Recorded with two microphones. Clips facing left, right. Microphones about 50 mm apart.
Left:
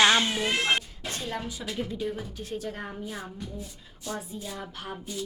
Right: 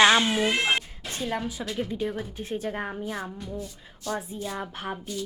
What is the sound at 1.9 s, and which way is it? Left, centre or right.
A woman's voice, right.